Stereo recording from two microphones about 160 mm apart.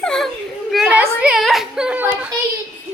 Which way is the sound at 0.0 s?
5° left (ahead or behind).